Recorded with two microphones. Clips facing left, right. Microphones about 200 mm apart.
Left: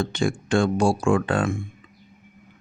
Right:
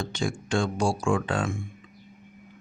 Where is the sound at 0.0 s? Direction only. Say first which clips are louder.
Left 6 dB; 60° left (ahead or behind).